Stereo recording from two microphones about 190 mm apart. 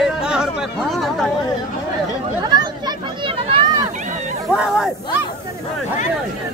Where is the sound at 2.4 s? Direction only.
20° right (ahead or behind).